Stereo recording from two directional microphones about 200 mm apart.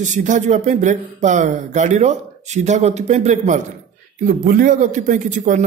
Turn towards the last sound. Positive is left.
turn(degrees=-40)  # may be behind; listen again after turning